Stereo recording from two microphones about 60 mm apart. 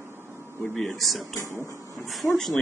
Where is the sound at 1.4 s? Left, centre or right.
Left.